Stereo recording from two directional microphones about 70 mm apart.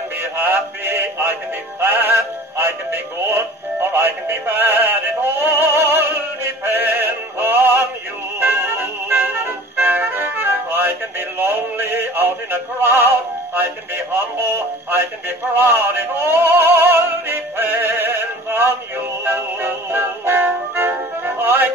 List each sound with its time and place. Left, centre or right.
0.2 s a sound: right
1.8 s music: right
2.1 s synthetic singing: right
3.9 s music: right
14.1 s synthetic singing: right
19.2 s music: right